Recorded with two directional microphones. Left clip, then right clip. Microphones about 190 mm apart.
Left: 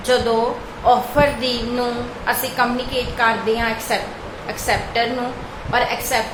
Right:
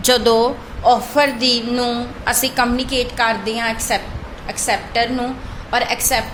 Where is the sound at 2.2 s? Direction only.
55° right (ahead or behind).